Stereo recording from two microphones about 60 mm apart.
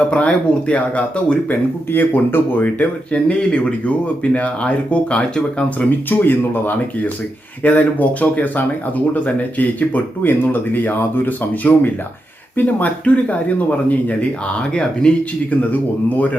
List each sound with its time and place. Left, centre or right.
0.1 s speech: left
1.5 s speech: left
3.1 s speech: centre
6.1 s speech: left; by 15.1 s centre
15.7 s speech: left